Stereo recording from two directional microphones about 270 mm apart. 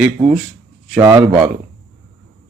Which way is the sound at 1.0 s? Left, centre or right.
Centre.